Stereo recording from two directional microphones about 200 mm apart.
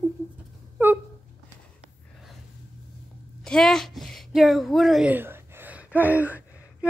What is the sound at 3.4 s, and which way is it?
Speech, 5° left (ahead or behind).